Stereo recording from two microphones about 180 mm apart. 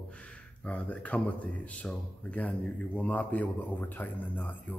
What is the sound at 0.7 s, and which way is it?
Speech, 10° left (ahead or behind).